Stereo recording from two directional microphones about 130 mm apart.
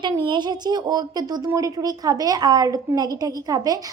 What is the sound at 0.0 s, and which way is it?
A woman's voice, 35° right (ahead or behind).